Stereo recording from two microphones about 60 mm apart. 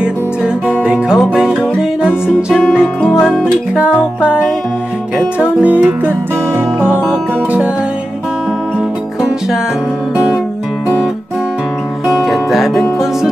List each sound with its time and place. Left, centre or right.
0.7 s music: centre
3.7 s music: centre
5.4 s music: right
12.1 s music: centre